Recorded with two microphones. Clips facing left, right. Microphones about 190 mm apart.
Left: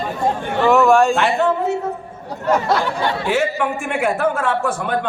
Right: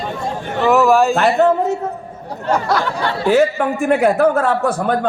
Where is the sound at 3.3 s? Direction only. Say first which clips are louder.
Right 8 dB; 40° right (ahead or behind).